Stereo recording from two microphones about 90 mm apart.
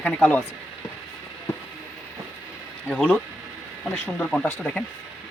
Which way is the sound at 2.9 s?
15° left (ahead or behind).